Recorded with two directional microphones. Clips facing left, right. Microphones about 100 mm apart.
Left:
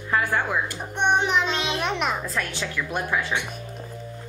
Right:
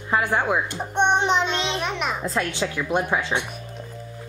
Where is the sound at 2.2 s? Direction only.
20° right (ahead or behind).